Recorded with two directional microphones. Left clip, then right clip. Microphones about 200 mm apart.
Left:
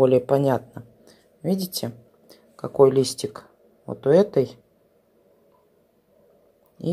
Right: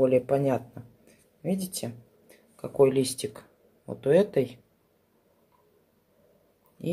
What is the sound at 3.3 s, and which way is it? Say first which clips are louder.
Speech: left 7 dB; 15° left (ahead or behind).